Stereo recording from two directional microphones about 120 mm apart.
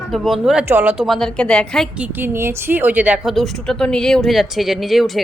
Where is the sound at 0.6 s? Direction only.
20° right (ahead or behind).